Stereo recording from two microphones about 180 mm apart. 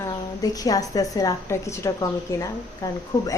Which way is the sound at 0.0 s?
20° left (ahead or behind).